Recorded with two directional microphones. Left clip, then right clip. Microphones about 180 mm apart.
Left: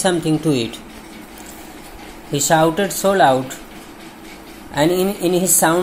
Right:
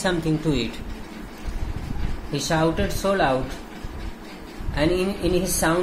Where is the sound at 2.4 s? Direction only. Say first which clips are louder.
Left 8 dB; 30° left (ahead or behind).